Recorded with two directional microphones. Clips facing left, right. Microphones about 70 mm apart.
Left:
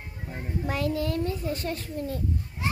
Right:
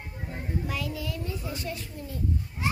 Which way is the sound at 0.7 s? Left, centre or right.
Left.